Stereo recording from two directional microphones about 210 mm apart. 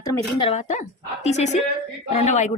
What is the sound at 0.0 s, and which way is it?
Speech, 20° left (ahead or behind).